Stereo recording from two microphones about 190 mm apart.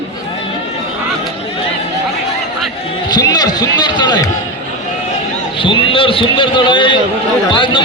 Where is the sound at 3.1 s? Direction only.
20° left (ahead or behind).